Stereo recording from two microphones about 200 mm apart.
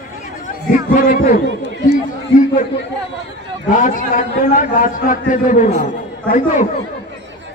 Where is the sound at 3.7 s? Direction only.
40° left (ahead or behind).